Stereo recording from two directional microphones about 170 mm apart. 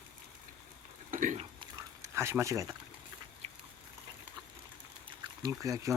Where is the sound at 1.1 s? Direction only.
50° right (ahead or behind).